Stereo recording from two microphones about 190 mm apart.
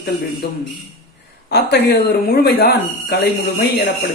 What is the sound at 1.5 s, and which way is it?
Speech, 60° left (ahead or behind).